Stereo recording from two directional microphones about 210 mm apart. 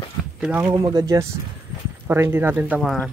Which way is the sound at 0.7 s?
20° right (ahead or behind).